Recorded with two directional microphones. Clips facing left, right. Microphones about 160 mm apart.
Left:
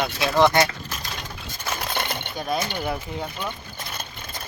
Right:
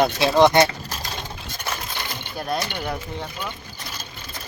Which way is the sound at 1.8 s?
60° left (ahead or behind).